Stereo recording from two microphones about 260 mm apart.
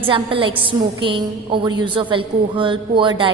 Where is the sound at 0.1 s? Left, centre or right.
Centre.